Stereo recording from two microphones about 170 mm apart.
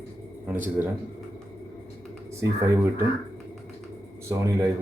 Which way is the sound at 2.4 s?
15° right (ahead or behind).